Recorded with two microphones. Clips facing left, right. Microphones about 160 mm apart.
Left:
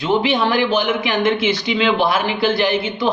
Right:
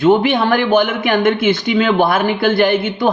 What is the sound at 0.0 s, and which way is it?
Speech, 50° right (ahead or behind).